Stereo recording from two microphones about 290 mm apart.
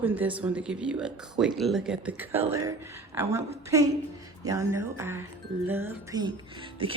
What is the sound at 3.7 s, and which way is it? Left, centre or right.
Speech, centre.